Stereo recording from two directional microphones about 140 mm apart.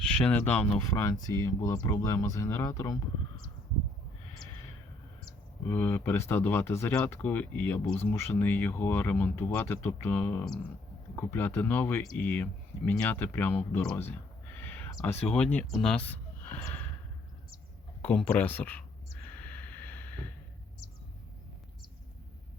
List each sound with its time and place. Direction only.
0.3 s speech: 10° left (ahead or behind)
5.6 s speech: 15° left (ahead or behind)
14.6 s a sound: 15° left (ahead or behind)
15.0 s speech: 10° left (ahead or behind)
18.3 s speech: 15° left (ahead or behind)
19.2 s a sound: 10° left (ahead or behind)